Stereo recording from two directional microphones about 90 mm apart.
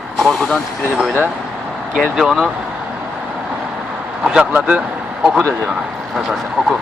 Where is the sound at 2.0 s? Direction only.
Centre (ahead or behind).